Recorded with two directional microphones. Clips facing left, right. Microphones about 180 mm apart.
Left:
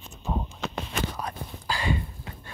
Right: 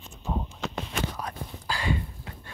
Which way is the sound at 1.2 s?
20° left (ahead or behind).